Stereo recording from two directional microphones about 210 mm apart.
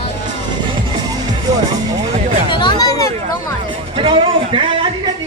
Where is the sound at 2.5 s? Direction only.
20° left (ahead or behind).